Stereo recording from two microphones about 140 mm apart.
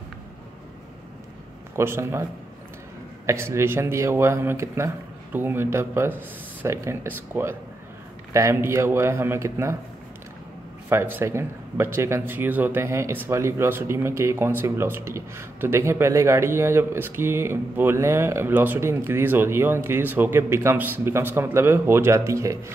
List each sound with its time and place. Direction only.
1.8 s speech: 20° right (ahead or behind)
3.3 s speech: 20° right (ahead or behind)
10.9 s speech: 15° right (ahead or behind)